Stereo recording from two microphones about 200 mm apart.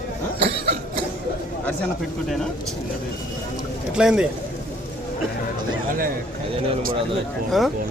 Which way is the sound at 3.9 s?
5° right (ahead or behind).